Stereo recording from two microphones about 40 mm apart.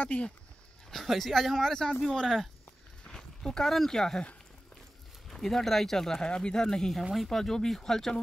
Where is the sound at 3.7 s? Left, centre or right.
Centre.